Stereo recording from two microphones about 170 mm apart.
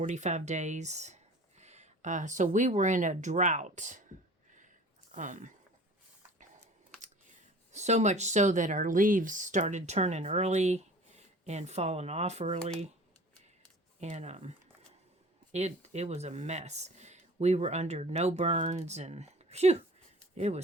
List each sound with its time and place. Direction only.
0.0 s speech: 45° right (ahead or behind)
5.1 s speech: 50° right (ahead or behind)
7.0 s speech: 45° right (ahead or behind)
14.0 s speech: 40° right (ahead or behind)
15.5 s speech: 40° right (ahead or behind)